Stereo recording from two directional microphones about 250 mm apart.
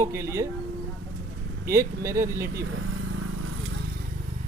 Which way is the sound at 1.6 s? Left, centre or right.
Centre.